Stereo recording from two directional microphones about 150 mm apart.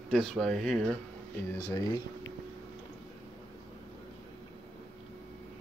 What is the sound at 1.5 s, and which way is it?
Speech, 25° left (ahead or behind).